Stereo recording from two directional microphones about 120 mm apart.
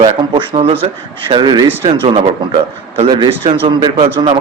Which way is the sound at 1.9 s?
50° right (ahead or behind).